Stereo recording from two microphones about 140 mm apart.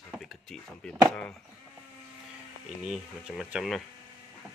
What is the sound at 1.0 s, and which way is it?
Speech, 10° left (ahead or behind).